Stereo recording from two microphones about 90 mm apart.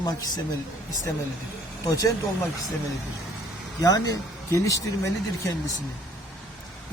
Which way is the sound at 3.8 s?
45° left (ahead or behind).